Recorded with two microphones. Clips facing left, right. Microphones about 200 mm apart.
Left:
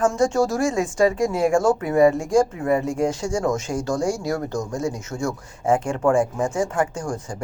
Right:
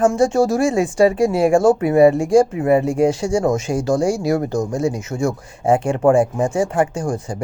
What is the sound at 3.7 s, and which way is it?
Speech, 30° right (ahead or behind).